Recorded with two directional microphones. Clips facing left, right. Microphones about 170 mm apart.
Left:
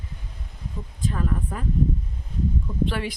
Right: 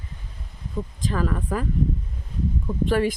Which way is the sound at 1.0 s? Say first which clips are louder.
Right 1 dB; 90° right.